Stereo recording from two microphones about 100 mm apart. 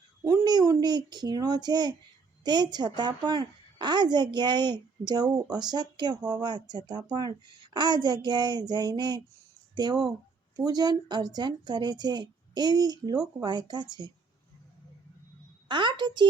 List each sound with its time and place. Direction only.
0.3 s a woman's voice: 40° right (ahead or behind)
15.7 s a woman's voice: 55° right (ahead or behind)